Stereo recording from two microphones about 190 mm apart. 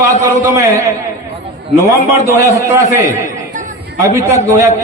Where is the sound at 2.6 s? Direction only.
15° right (ahead or behind).